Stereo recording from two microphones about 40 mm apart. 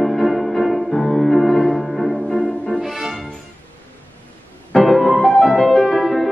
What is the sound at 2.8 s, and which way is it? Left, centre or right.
Music, centre.